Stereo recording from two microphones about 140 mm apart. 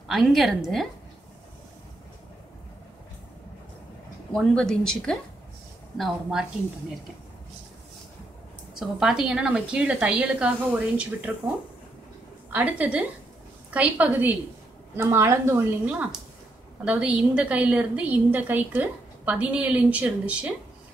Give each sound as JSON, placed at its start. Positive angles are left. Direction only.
{"t": 0.1, "sound": "speech", "side_deg": 0}
{"t": 4.3, "sound": "speech", "side_deg": 5}
{"t": 8.7, "sound": "a woman's voice", "side_deg": -5}
{"t": 12.5, "sound": "a woman's voice", "side_deg": -10}